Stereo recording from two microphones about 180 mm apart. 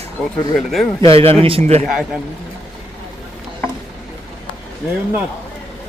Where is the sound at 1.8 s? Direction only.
Centre (ahead or behind).